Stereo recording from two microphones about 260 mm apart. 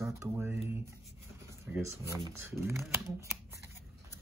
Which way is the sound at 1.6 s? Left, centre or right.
Centre.